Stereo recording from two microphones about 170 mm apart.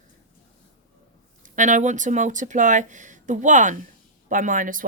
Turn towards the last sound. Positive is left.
turn(degrees=-50)  # may be behind; listen again after turning